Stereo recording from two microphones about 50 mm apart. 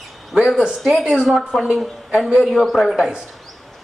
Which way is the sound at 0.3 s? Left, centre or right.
Centre.